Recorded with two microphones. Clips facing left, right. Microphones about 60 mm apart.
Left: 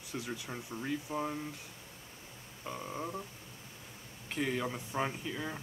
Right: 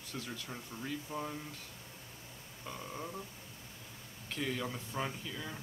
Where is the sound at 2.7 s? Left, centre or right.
Centre.